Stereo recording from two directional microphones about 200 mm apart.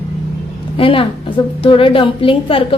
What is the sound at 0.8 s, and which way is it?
A woman's voice, 25° left (ahead or behind).